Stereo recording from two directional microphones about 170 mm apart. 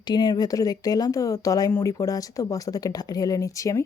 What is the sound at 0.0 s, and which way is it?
Speech, 25° left (ahead or behind).